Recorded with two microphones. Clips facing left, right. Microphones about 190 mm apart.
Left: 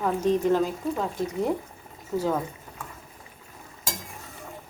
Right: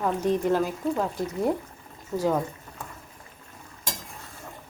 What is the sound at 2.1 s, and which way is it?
Speech, 10° right (ahead or behind).